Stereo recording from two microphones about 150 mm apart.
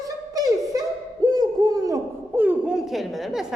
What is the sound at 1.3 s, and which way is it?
Speech, 25° right (ahead or behind).